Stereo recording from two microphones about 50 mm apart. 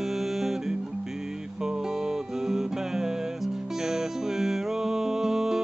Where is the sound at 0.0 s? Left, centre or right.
Centre.